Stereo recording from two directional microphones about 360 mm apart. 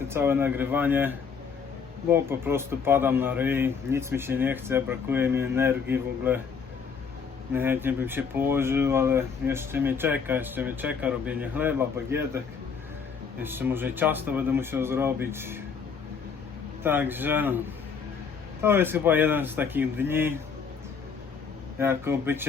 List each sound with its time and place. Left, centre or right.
0.1 s speech: centre
7.5 s speech: centre
13.4 s speech: centre
16.8 s speech: centre
18.6 s speech: centre
21.8 s speech: centre